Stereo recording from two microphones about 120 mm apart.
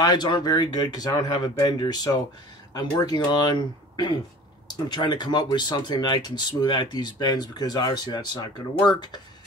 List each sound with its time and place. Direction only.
0.0 s speech: 35° left (ahead or behind)